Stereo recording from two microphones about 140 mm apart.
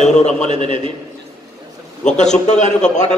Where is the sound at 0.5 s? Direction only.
40° right (ahead or behind).